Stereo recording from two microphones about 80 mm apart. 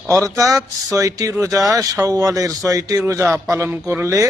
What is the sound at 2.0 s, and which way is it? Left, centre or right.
Mantra, right.